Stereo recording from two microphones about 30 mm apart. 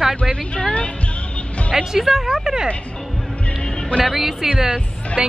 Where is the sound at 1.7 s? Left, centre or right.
Centre.